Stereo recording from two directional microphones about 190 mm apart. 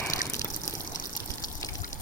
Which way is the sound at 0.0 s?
15° left (ahead or behind).